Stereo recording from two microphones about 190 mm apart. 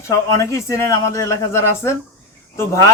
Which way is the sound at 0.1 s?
15° left (ahead or behind).